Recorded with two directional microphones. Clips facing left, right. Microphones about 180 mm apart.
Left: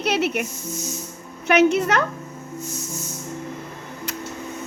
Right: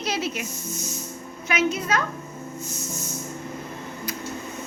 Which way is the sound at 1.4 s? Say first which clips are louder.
Left 8 dB; 65° left (ahead or behind).